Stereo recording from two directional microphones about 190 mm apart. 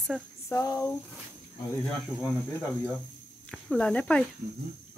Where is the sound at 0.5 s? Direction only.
15° left (ahead or behind).